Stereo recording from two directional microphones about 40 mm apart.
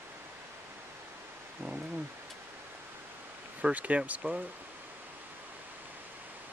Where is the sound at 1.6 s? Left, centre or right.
Right.